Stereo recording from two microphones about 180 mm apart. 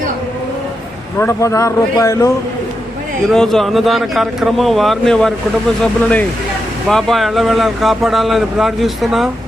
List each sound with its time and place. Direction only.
1.2 s speech: 15° left (ahead or behind)
3.3 s speech: centre (ahead or behind)